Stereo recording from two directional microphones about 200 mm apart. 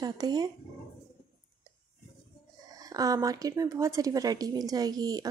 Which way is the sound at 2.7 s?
20° right (ahead or behind).